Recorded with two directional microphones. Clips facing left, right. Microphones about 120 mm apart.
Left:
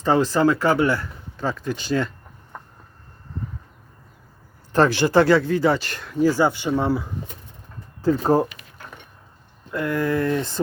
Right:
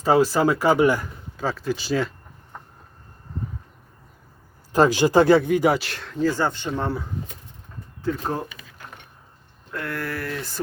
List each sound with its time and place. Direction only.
0.0 s speech: 10° right (ahead or behind)
1.5 s speech: 5° right (ahead or behind)
4.7 s speech: 15° right (ahead or behind)
5.8 s speech: centre (ahead or behind)
8.0 s speech: 35° left (ahead or behind)
9.7 s speech: 15° left (ahead or behind)